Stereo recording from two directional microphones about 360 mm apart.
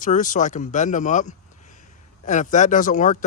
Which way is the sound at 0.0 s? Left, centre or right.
Left.